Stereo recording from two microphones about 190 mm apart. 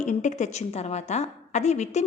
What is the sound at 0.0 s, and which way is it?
A woman's voice, 40° left (ahead or behind).